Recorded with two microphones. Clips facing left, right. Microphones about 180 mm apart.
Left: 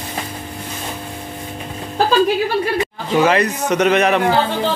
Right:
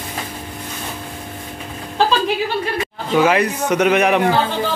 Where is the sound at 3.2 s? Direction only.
10° right (ahead or behind).